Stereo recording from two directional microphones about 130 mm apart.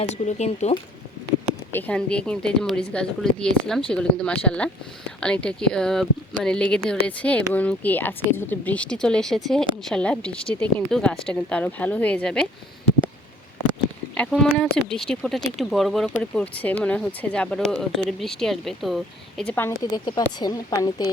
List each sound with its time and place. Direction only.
0.0 s speech: 60° left (ahead or behind)
1.7 s a woman's voice: 10° left (ahead or behind)
14.2 s speech: 5° left (ahead or behind)
19.8 s speech: 30° left (ahead or behind)